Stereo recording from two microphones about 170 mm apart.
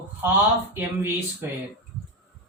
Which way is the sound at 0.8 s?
10° right (ahead or behind).